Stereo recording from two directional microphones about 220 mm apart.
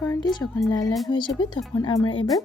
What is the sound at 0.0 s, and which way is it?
Speech, 15° left (ahead or behind).